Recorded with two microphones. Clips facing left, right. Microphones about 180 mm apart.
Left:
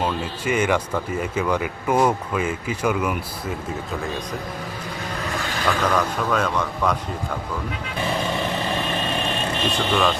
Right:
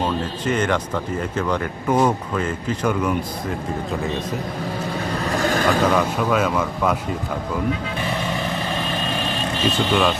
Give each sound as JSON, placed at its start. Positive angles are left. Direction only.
{"t": 0.0, "sound": "speech", "side_deg": 10}
{"t": 5.4, "sound": "vehicle", "side_deg": -45}
{"t": 5.9, "sound": "speech", "side_deg": -10}
{"t": 9.6, "sound": "speech", "side_deg": 0}